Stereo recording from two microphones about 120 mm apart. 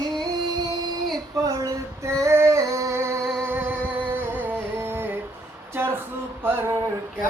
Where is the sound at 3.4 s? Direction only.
20° right (ahead or behind).